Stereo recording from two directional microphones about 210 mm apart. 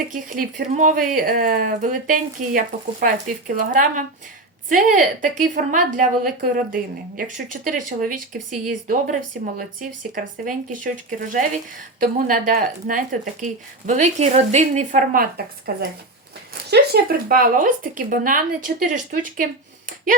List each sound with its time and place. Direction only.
0.1 s a woman's voice: 40° right (ahead or behind)